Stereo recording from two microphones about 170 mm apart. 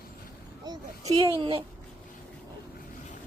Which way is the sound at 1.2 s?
30° right (ahead or behind).